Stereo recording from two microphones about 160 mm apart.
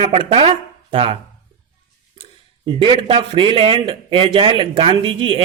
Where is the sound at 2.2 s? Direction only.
30° right (ahead or behind).